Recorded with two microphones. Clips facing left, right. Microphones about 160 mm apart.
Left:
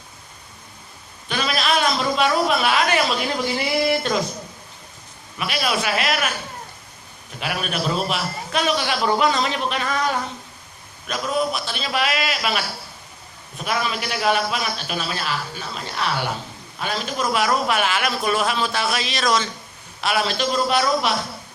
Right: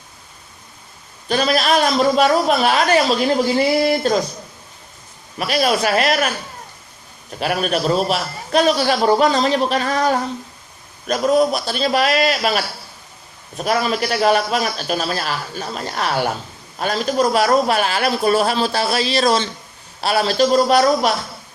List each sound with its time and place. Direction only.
1.3 s a man's voice: 40° right (ahead or behind)
5.4 s a man's voice: 40° right (ahead or behind)
7.3 s a man's voice: 40° right (ahead or behind)
13.7 s a man's voice: 40° right (ahead or behind)